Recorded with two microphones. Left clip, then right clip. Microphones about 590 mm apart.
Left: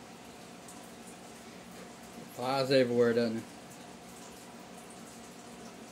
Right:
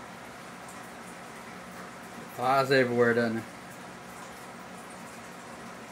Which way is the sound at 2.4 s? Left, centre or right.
Left.